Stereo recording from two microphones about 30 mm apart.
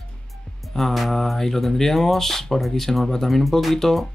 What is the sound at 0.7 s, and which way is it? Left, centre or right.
Speech, centre.